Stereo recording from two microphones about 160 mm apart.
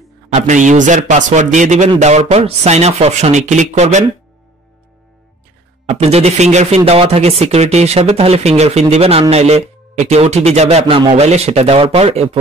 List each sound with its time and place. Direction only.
0.3 s speech: 50° right (ahead or behind)
5.9 s speech: 40° right (ahead or behind)